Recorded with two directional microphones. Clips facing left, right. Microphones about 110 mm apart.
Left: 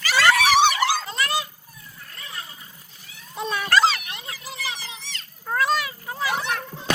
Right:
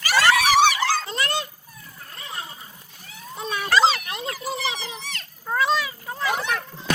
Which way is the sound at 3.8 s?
30° right (ahead or behind).